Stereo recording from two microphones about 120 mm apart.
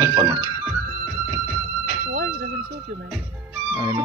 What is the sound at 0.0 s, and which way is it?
Music, 30° right (ahead or behind).